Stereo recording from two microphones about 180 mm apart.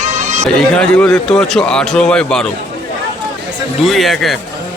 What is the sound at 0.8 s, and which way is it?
A man's voice, 5° left (ahead or behind).